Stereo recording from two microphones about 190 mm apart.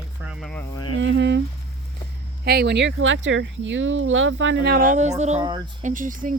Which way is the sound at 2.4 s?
60° right (ahead or behind).